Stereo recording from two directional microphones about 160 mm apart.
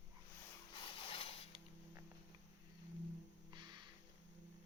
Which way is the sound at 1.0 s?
35° left (ahead or behind).